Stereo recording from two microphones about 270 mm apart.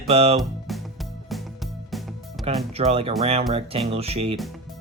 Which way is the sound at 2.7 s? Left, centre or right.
Right.